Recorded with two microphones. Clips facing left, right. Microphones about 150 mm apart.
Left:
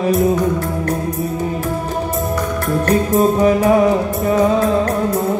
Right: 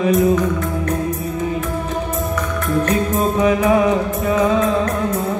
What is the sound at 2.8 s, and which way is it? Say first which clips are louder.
Music: left 8 dB; 35° left (ahead or behind).